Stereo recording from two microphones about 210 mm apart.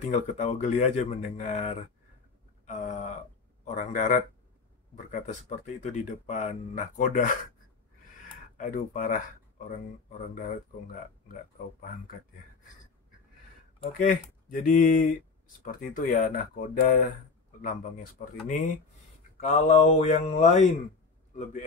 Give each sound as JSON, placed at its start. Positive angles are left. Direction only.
{"t": 0.0, "sound": "speech", "side_deg": 35}
{"t": 2.6, "sound": "a sound", "side_deg": 35}
{"t": 3.6, "sound": "speech", "side_deg": 35}
{"t": 8.5, "sound": "speech", "side_deg": 40}
{"t": 11.2, "sound": "speech", "side_deg": 40}
{"t": 13.9, "sound": "speech", "side_deg": 40}
{"t": 19.4, "sound": "speech", "side_deg": 35}